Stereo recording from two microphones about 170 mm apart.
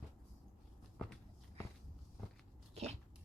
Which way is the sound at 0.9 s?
5° left (ahead or behind).